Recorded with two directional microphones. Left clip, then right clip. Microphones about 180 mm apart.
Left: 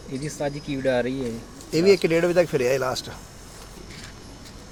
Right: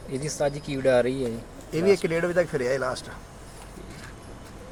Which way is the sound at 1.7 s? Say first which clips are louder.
Left 4 dB; 35° left (ahead or behind).